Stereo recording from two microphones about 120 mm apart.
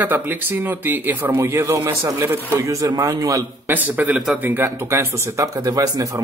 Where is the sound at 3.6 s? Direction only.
15° right (ahead or behind).